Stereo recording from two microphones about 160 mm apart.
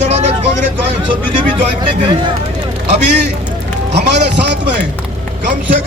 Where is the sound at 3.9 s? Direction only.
90° right.